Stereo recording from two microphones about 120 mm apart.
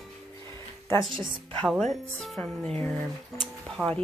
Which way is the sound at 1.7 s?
Centre (ahead or behind).